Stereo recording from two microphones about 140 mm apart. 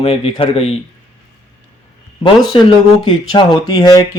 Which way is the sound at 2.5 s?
40° left (ahead or behind).